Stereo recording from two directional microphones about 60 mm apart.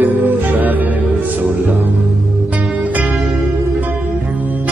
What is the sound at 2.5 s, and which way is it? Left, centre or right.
Music, right.